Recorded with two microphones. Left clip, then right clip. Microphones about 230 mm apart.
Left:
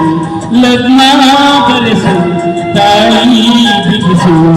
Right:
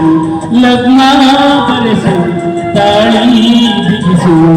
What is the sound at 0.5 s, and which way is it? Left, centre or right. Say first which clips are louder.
A man's voice: left 1 dB; left.